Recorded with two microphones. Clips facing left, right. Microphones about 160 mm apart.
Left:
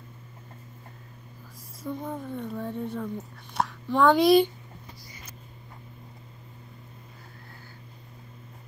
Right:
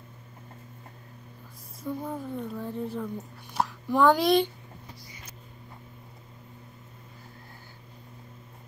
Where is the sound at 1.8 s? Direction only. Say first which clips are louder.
Even; 5° right (ahead or behind).